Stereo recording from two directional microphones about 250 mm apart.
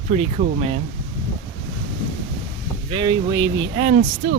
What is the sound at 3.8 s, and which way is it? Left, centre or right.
Speech, right.